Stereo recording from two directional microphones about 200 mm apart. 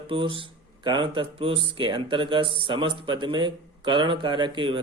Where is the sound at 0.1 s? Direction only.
25° right (ahead or behind).